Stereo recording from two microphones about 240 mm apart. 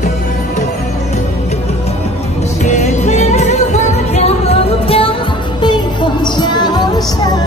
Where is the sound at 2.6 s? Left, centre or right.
Left.